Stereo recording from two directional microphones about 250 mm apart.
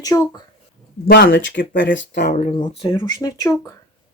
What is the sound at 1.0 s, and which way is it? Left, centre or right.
Speech, left.